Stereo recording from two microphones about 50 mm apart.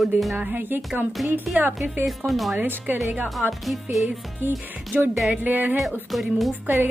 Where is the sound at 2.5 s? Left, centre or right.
Right.